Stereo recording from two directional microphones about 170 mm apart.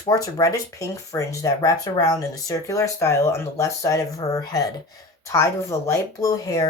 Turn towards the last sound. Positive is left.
turn(degrees=20)  # may be behind; listen again after turning